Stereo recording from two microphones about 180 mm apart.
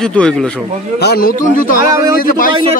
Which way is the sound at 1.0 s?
60° left (ahead or behind).